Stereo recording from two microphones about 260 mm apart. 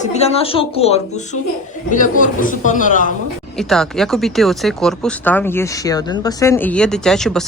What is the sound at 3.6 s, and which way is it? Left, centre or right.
Speech, centre.